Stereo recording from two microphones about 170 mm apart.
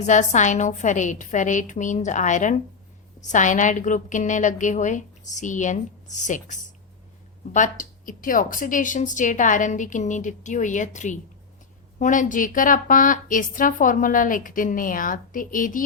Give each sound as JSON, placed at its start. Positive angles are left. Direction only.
{"t": 0.0, "sound": "a woman's voice", "side_deg": 45}